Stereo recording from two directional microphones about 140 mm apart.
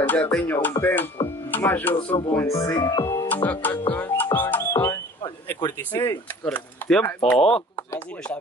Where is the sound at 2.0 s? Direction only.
35° left (ahead or behind).